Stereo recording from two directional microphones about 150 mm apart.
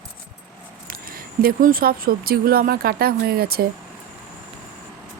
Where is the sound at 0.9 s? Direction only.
70° right (ahead or behind); by 3.7 s 90° right.